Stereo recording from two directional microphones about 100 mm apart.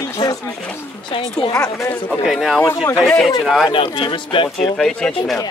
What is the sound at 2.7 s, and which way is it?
Speech, 40° left (ahead or behind).